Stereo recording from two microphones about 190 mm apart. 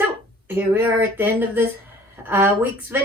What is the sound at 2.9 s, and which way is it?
Speech, 10° right (ahead or behind).